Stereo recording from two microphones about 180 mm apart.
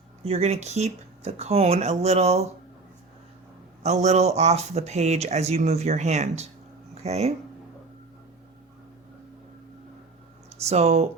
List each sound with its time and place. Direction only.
0.3 s speech: 35° right (ahead or behind)
3.8 s speech: 40° right (ahead or behind)
10.6 s speech: 35° right (ahead or behind)